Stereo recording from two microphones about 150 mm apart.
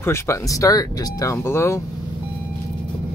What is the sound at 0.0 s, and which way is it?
Speech, 15° left (ahead or behind).